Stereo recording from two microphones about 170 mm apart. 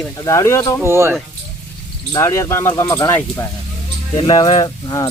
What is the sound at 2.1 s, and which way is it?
Speech, 20° left (ahead or behind).